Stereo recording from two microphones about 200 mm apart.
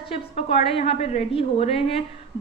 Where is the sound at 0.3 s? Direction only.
30° left (ahead or behind).